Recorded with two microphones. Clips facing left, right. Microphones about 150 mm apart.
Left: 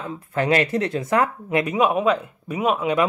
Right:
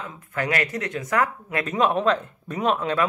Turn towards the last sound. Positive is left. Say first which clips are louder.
# left 2 dB
turn(degrees=10)  # may be behind; listen again after turning